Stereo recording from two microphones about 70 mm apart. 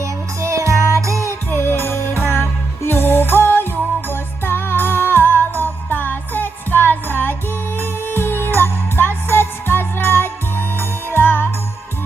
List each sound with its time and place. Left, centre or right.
0.0 s music: right
1.2 s music: left